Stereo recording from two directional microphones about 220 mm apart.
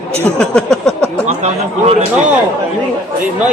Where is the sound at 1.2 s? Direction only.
30° right (ahead or behind).